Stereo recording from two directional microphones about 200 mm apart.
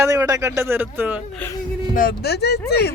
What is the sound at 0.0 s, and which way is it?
Speech, 15° right (ahead or behind).